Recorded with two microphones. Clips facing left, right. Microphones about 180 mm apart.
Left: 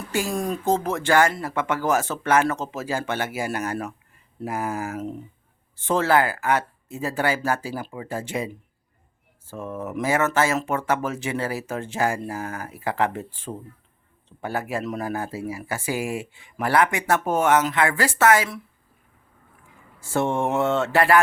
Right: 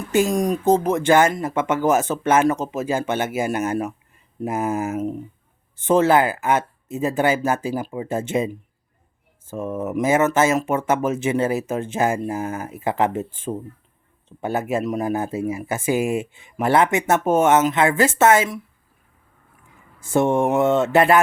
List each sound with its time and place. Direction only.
0.1 s speech: 20° right (ahead or behind)
9.5 s speech: 20° right (ahead or behind)
20.0 s speech: 20° right (ahead or behind)